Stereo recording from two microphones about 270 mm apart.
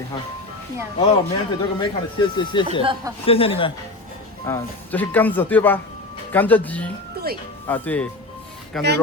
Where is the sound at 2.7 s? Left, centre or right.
Centre.